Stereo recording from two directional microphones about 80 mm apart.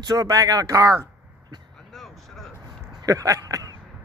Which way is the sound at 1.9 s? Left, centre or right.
Centre.